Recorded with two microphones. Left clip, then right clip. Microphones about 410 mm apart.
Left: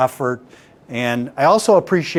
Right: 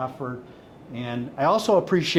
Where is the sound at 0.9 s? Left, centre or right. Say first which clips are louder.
Left 11 dB; left.